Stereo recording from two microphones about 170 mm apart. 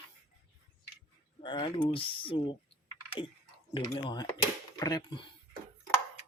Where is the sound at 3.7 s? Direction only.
30° left (ahead or behind).